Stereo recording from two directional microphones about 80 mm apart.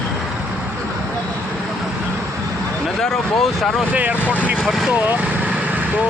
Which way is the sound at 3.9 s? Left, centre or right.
Centre.